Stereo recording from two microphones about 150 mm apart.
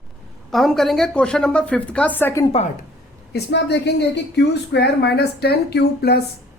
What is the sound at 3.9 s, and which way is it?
A woman's voice, 90° left.